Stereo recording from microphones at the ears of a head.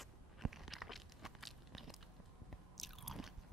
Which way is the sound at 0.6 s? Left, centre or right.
Centre.